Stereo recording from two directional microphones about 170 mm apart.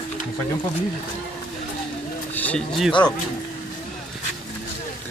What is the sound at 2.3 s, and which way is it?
Speech, 10° left (ahead or behind).